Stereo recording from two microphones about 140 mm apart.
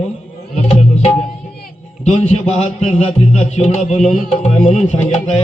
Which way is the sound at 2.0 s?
55° left (ahead or behind).